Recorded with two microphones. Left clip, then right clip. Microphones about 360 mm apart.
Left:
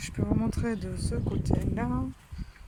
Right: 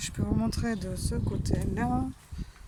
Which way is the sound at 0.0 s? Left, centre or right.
Centre.